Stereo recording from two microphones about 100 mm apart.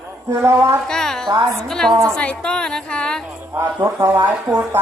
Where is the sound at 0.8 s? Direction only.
5° left (ahead or behind).